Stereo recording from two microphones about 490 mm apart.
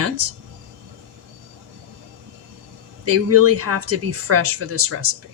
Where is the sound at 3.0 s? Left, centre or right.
Right.